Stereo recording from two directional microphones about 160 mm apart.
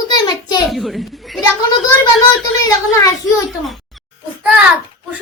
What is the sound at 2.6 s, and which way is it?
Speech, 20° left (ahead or behind).